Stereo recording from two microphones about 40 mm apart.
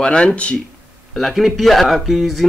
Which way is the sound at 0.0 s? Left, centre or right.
Left.